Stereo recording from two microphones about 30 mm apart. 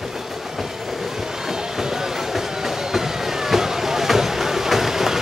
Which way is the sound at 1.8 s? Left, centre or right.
Centre.